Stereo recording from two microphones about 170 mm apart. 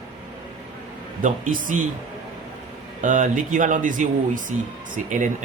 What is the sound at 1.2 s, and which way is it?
Speech, 50° right (ahead or behind).